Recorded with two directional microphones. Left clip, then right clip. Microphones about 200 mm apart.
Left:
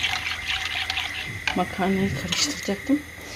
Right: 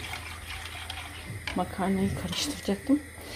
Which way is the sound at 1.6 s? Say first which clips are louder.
Left 3 dB; 10° left (ahead or behind).